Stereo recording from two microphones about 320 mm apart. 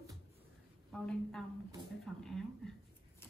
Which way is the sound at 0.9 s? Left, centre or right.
Centre.